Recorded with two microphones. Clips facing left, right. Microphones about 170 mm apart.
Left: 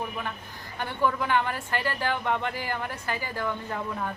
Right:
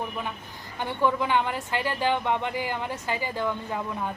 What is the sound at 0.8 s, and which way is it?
A woman's voice, 15° right (ahead or behind).